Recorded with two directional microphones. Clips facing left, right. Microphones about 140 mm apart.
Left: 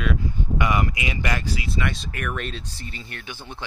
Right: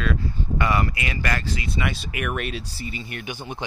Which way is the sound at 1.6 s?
5° right (ahead or behind).